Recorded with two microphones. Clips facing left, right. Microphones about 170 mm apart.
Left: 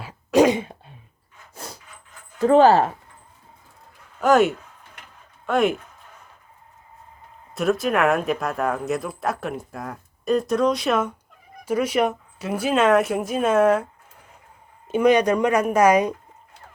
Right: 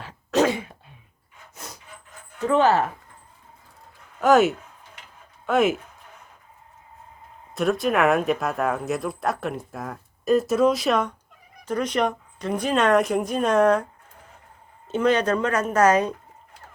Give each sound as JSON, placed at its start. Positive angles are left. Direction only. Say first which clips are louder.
{"t": 0.0, "sound": "throat clearing", "louder": "left 4 dB", "side_deg": 10}
{"t": 1.5, "sound": "wood", "louder": "left 3 dB", "side_deg": 30}
{"t": 2.4, "sound": "speech", "louder": "left 5 dB", "side_deg": 35}
{"t": 4.2, "sound": "speech", "louder": "even", "side_deg": 0}
{"t": 7.5, "sound": "speech", "louder": "left 1 dB", "side_deg": 0}
{"t": 14.8, "sound": "speech", "louder": "left 3 dB", "side_deg": 10}